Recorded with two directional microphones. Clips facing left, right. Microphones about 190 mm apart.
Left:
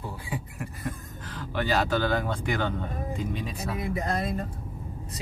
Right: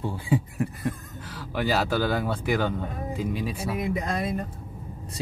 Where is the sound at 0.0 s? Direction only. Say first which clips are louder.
Right 9 dB; 25° right (ahead or behind).